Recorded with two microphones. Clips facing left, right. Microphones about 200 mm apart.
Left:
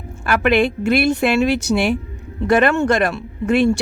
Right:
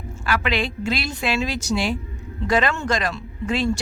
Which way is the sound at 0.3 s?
55° left (ahead or behind).